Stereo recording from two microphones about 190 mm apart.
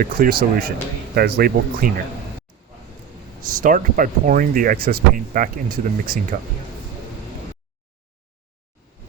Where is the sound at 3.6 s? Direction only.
45° right (ahead or behind).